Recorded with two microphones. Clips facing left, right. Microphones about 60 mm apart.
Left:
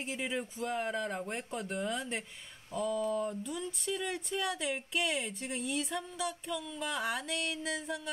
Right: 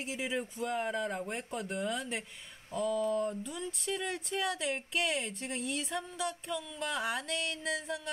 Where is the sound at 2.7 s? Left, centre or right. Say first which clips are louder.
Right 1 dB; left.